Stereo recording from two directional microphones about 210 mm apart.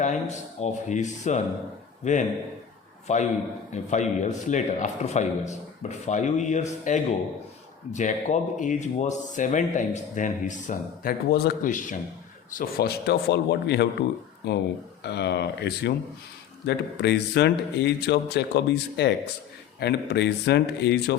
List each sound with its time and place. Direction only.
0.0 s a man's voice: 35° left (ahead or behind); by 21.2 s 55° left (ahead or behind)